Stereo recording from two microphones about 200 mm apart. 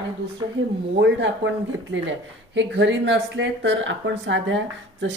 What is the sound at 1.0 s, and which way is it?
Speech, 65° right (ahead or behind).